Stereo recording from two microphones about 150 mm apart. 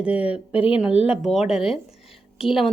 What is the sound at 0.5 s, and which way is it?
Speech, 40° left (ahead or behind).